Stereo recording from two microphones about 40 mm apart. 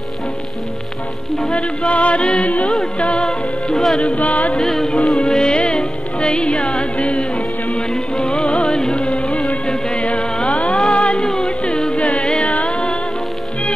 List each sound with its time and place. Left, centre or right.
1.5 s music: left
2.4 s music: left
3.2 s music: centre
4.0 s music: left
4.6 s music: centre
8.5 s music: left
10.9 s music: left
11.4 s music: left
12.2 s carnatic music: left